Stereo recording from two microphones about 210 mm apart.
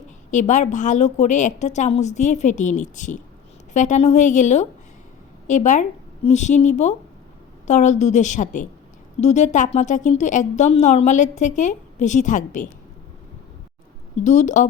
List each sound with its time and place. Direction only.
0.3 s a woman's voice: 35° left (ahead or behind)
14.3 s a woman's voice: 35° left (ahead or behind)